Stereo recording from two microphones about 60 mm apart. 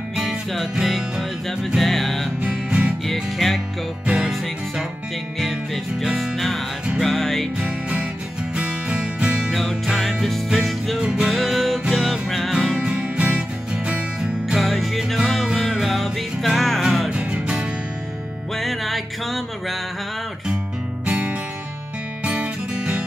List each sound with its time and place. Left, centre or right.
0.1 s music: centre
2.4 s music: centre
3.1 s music: centre
4.0 s music: centre
6.0 s music: centre
7.6 s music: centre
9.5 s music: centre
11.0 s music: centre
11.3 s music: centre
12.7 s music: centre
14.6 s music: centre
17.1 s music: centre
18.6 s music: centre
21.0 s music: right